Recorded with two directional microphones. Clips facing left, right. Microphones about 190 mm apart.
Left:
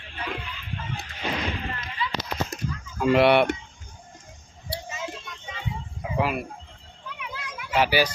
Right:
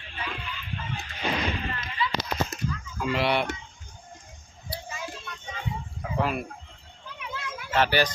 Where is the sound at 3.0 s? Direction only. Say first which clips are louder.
Left 8 dB; 55° left (ahead or behind).